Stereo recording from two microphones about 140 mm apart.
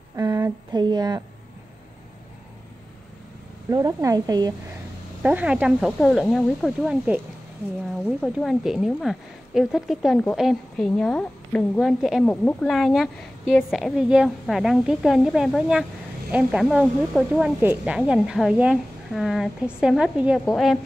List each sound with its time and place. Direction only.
0.1 s speech: 25° right (ahead or behind)
3.7 s a woman's voice: 25° right (ahead or behind)
5.2 s speech: 10° right (ahead or behind)
8.0 s speech: 5° left (ahead or behind)